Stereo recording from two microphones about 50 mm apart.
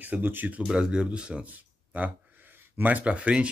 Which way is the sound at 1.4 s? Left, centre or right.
Right.